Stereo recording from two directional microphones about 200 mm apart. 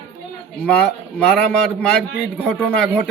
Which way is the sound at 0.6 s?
5° left (ahead or behind).